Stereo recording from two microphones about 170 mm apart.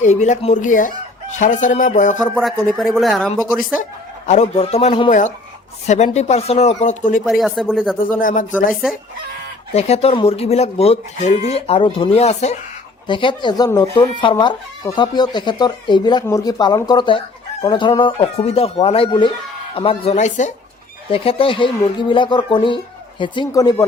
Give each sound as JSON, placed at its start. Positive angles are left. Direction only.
{"t": 0.0, "sound": "speech", "side_deg": 45}
{"t": 2.3, "sound": "speech", "side_deg": 0}
{"t": 4.3, "sound": "speech", "side_deg": 40}
{"t": 7.3, "sound": "speech", "side_deg": 0}
{"t": 7.9, "sound": "speech", "side_deg": 55}
{"t": 9.7, "sound": "speech", "side_deg": 40}
{"t": 13.1, "sound": "speech", "side_deg": 30}
{"t": 21.1, "sound": "speech", "side_deg": 30}